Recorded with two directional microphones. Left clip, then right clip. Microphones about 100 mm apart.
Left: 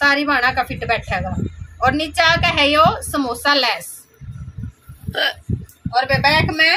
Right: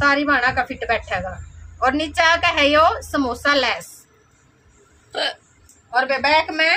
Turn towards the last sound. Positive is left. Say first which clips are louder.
# left 2 dB
turn(degrees=-25)  # may be behind; listen again after turning